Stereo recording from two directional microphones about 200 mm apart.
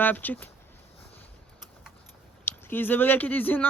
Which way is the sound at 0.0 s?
10° left (ahead or behind).